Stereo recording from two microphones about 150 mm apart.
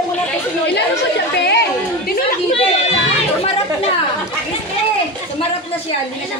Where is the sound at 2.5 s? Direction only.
40° left (ahead or behind).